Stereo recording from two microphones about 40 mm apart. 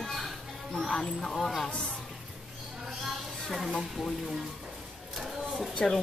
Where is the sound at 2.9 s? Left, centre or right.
Centre.